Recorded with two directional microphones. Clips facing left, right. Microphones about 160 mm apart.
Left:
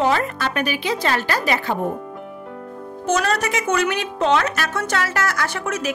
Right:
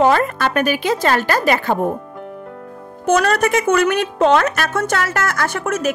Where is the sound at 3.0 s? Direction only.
55° right (ahead or behind).